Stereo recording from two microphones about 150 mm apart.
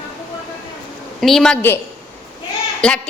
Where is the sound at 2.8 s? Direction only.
5° left (ahead or behind).